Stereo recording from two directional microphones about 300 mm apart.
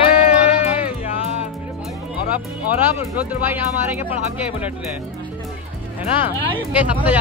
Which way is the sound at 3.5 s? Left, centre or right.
Centre.